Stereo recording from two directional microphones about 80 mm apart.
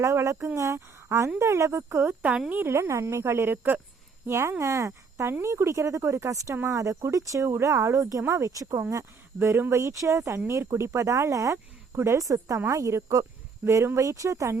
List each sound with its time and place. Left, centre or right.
0.0 s a woman's voice: right
4.3 s speech: right